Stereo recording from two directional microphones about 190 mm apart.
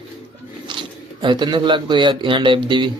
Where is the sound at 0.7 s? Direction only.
25° right (ahead or behind).